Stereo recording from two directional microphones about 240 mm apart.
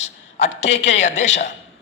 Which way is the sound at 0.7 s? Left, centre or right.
Left.